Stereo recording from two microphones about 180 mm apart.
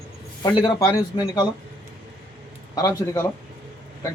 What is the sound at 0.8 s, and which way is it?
Speech, 20° left (ahead or behind).